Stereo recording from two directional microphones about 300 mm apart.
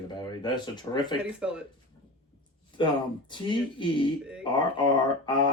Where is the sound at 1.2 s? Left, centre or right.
Centre.